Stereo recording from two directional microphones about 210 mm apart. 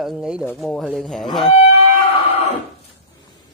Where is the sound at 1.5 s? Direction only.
30° left (ahead or behind).